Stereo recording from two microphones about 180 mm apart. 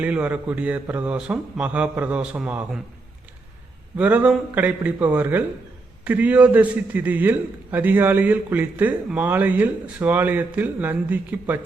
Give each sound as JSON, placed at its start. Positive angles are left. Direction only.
{"t": 0.0, "sound": "a man's voice", "side_deg": -10}
{"t": 3.9, "sound": "a man's voice", "side_deg": -10}